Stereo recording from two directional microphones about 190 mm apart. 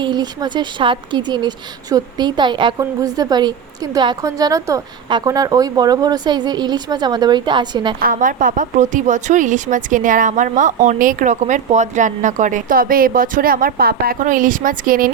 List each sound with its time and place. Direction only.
0.0 s a woman's voice: 25° right (ahead or behind)
7.9 s speech: 45° right (ahead or behind)